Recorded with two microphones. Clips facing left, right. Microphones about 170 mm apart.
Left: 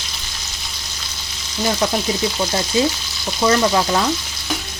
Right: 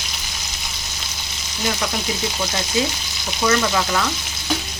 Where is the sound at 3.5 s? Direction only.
30° left (ahead or behind).